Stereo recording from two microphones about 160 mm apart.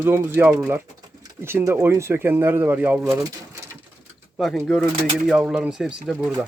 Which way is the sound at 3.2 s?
20° right (ahead or behind).